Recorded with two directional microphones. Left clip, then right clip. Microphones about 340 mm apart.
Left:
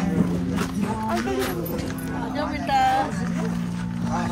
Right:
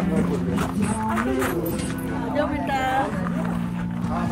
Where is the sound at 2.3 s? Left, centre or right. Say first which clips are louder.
Left 1 dB; left.